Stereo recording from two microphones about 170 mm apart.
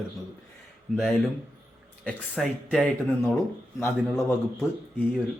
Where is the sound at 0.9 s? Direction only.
Centre (ahead or behind).